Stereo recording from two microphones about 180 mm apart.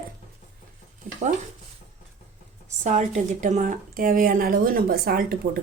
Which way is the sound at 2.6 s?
40° right (ahead or behind).